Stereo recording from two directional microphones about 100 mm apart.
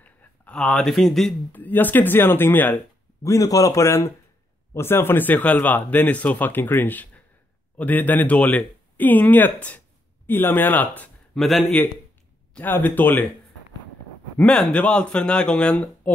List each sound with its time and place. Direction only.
0.0 s a sound: 15° left (ahead or behind)
0.6 s speech: 5° left (ahead or behind)
1.5 s speech: 20° left (ahead or behind)
3.3 s speech: 35° left (ahead or behind); by 11.1 s 15° left (ahead or behind)
11.3 s speech: centre (ahead or behind)
12.5 s speech: 15° left (ahead or behind)
14.4 s speech: 10° left (ahead or behind)